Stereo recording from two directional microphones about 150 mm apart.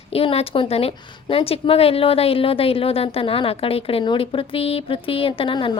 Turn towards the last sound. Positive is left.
turn(degrees=35)  # may be behind; listen again after turning